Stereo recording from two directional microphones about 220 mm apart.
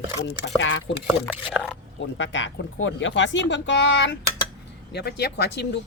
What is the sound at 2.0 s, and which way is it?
A woman's voice, 55° left (ahead or behind).